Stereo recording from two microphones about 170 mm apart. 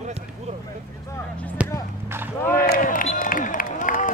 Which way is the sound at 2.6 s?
55° left (ahead or behind).